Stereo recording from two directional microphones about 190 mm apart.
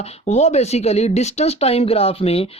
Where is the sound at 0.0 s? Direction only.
35° left (ahead or behind).